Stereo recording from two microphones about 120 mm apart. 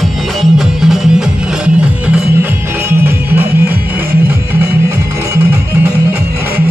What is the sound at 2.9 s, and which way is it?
Music, 15° right (ahead or behind).